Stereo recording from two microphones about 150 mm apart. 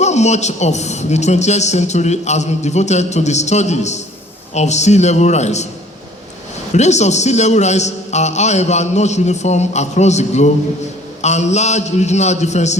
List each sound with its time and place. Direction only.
0.0 s a man's voice: 50° left (ahead or behind)
6.7 s a man's voice: 50° left (ahead or behind)